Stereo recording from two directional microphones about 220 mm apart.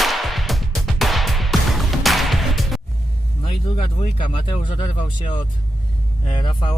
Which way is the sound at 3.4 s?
25° left (ahead or behind).